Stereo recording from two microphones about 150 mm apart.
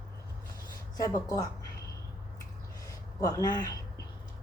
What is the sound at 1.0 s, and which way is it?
Speech, 25° left (ahead or behind).